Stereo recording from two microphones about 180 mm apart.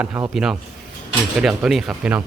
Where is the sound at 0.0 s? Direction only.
10° right (ahead or behind).